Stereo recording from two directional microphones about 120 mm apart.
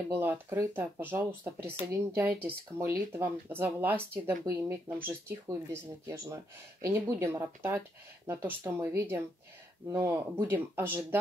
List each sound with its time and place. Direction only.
0.1 s speech: 20° right (ahead or behind)